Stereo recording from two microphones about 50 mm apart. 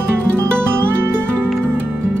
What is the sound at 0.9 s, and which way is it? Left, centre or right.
Music, right.